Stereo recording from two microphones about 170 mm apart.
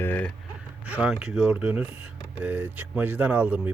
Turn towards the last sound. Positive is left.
turn(degrees=-10)  # may be behind; listen again after turning